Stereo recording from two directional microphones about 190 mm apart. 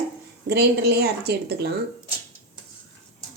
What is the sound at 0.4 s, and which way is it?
A woman's voice, 60° right (ahead or behind).